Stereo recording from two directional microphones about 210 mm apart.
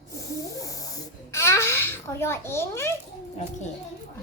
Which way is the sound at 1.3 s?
15° left (ahead or behind).